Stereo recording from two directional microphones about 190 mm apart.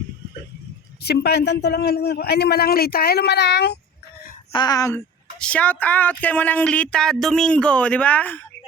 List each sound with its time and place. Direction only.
1.0 s a man's voice: 60° left (ahead or behind)
4.5 s speech: 20° left (ahead or behind)